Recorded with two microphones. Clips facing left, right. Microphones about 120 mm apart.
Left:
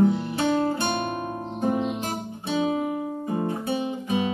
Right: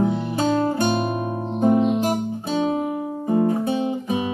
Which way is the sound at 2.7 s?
30° right (ahead or behind).